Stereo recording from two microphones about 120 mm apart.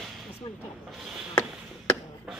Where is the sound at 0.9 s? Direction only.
5° right (ahead or behind).